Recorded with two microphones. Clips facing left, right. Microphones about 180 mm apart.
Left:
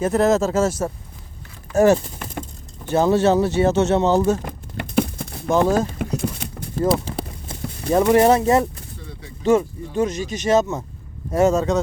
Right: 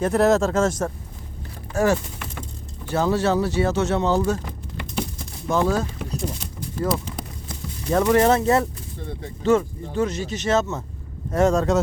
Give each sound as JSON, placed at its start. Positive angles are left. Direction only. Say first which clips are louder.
{"t": 0.0, "sound": "speech", "louder": "left 1 dB", "side_deg": 0}
{"t": 1.7, "sound": "speech", "louder": "left 5 dB", "side_deg": 20}
{"t": 4.4, "sound": "a sound", "louder": "left 3 dB", "side_deg": 55}
{"t": 5.5, "sound": "speech", "louder": "left 4 dB", "side_deg": 20}
{"t": 6.1, "sound": "a sound", "louder": "left 4 dB", "side_deg": 60}
{"t": 7.0, "sound": "clip-clop", "louder": "left 4 dB", "side_deg": 30}
{"t": 7.9, "sound": "speech", "louder": "left 3 dB", "side_deg": 15}